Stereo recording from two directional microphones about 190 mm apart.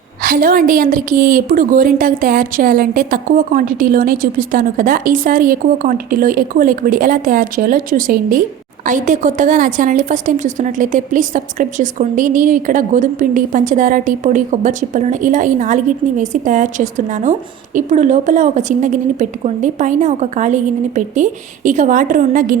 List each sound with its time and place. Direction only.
0.2 s a woman's voice: 50° right (ahead or behind)